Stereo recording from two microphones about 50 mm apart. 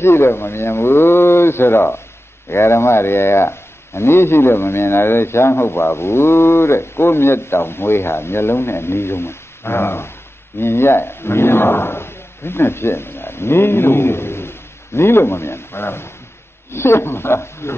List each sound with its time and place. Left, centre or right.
0.0 s speech: left
2.5 s speech: left